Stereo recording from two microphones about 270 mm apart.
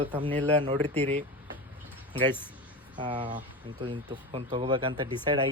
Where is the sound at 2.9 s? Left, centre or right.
Centre.